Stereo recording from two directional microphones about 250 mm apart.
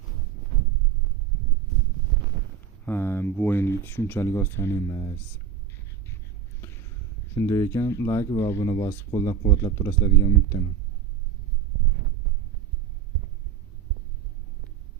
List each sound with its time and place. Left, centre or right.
2.8 s speech: centre
7.3 s speech: centre